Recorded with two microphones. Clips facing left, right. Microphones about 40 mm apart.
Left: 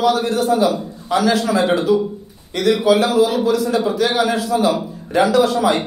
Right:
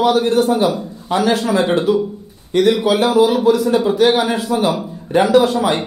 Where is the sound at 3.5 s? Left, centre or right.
Right.